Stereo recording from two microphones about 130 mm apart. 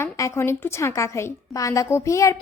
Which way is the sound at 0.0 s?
20° left (ahead or behind).